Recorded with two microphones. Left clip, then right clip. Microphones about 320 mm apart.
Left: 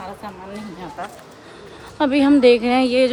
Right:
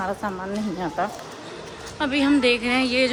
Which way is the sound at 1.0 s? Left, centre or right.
Right.